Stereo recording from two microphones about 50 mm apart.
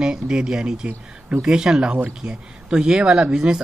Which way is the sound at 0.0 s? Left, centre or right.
Centre.